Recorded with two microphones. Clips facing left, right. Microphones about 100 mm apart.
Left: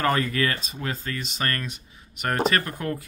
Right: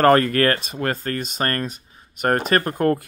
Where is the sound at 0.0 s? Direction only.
50° right (ahead or behind).